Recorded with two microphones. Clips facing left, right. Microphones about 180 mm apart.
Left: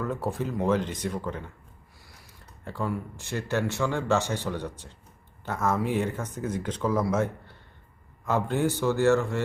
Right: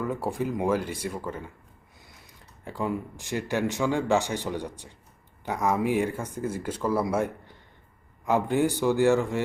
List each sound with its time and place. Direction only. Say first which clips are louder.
0.0 s speech: right 1 dB; 10° right (ahead or behind)
2.6 s speech: right 1 dB; 15° right (ahead or behind)